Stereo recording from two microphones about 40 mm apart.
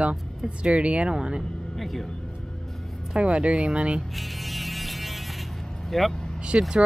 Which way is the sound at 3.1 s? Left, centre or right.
Right.